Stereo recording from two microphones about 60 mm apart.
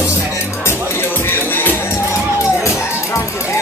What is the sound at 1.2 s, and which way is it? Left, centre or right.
Music, left.